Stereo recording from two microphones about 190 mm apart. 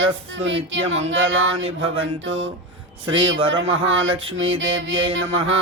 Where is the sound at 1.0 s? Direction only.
90° right.